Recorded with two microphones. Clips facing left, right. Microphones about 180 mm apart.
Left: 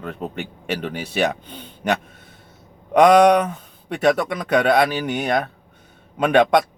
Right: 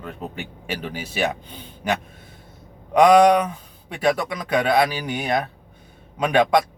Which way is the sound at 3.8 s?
55° left (ahead or behind).